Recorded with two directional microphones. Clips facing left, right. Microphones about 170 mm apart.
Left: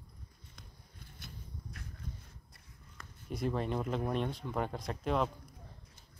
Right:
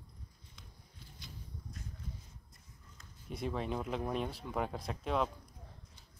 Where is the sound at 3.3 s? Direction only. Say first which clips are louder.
Left 3 dB; centre (ahead or behind).